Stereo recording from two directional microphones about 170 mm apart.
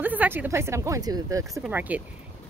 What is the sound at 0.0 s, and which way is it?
A woman's voice, 10° right (ahead or behind).